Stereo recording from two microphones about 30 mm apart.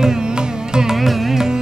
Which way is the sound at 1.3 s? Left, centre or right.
Centre.